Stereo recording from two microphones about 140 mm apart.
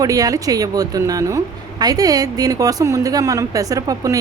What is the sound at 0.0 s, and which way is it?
Speech, 25° right (ahead or behind).